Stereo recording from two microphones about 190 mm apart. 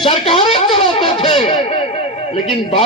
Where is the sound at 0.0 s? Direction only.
30° left (ahead or behind).